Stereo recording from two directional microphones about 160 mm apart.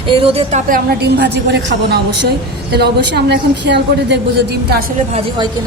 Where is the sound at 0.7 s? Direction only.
90° right.